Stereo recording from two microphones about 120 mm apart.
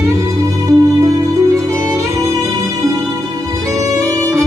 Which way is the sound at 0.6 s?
25° right (ahead or behind).